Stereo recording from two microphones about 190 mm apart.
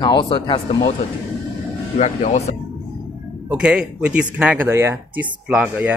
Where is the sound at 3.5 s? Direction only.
5° right (ahead or behind).